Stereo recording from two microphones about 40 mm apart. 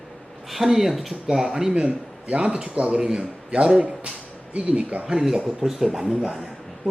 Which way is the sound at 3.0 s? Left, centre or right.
Right.